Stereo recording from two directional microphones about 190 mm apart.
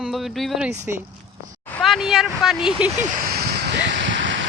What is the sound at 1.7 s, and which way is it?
Speech, 5° left (ahead or behind).